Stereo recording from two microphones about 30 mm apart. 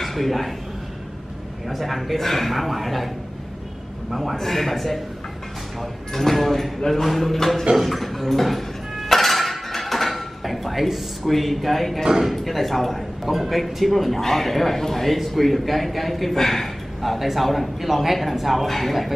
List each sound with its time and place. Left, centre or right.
0.0 s a man's voice: centre
1.7 s a man's voice: centre
4.1 s a man's voice: centre
7.3 s speech: centre
7.8 s a sound: centre
12.0 s speech: centre
12.3 s a man's voice: centre